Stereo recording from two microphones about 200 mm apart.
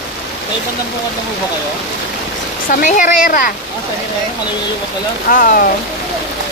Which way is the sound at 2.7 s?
40° left (ahead or behind).